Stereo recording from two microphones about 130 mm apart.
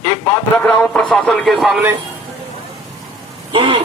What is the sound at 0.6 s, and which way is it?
Speech, 5° left (ahead or behind).